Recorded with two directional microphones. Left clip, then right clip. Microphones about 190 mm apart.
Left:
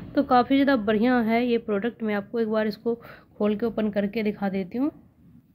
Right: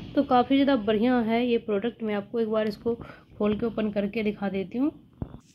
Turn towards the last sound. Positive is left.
turn(degrees=5)  # may be behind; listen again after turning